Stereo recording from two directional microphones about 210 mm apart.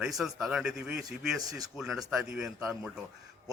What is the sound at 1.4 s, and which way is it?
Speech, 15° right (ahead or behind).